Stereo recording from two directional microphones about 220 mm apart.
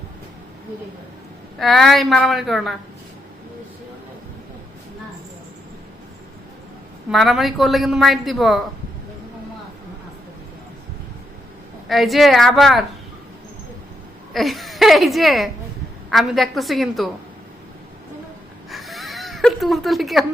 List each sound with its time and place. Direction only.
1.5 s a woman's voice: centre (ahead or behind)
7.1 s a woman's voice: centre (ahead or behind)
11.9 s a woman's voice: centre (ahead or behind)
14.3 s a woman's voice: centre (ahead or behind)
18.7 s a sound: centre (ahead or behind)